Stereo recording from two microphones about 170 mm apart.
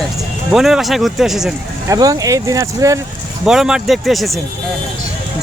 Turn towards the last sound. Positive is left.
turn(degrees=0)  # may be behind; listen again after turning